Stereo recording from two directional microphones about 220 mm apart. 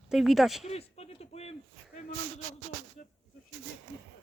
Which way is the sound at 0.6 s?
30° left (ahead or behind).